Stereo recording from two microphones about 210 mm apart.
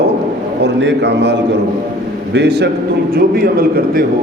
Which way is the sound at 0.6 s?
55° right (ahead or behind).